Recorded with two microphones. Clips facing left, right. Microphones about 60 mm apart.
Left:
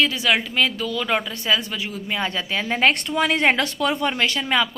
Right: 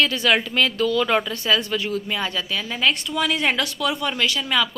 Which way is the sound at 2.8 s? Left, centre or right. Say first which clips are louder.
Left 2 dB; left.